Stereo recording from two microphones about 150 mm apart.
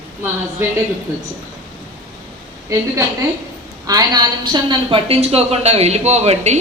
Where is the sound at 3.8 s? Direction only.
25° right (ahead or behind).